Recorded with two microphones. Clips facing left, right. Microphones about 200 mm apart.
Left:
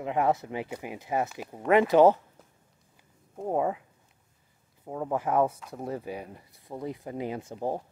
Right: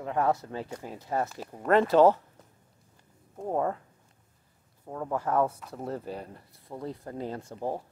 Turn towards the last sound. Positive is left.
turn(degrees=15)  # may be behind; listen again after turning